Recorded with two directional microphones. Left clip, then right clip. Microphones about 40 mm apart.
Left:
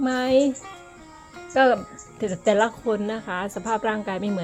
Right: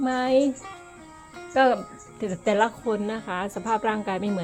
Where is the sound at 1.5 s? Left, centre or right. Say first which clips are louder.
Left 2 dB; left.